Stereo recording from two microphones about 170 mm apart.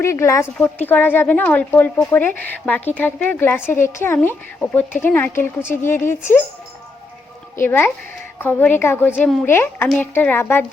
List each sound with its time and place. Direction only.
0.0 s speech: 15° left (ahead or behind)
7.6 s speech: 10° left (ahead or behind)